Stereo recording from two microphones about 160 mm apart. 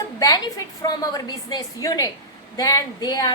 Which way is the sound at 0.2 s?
20° left (ahead or behind).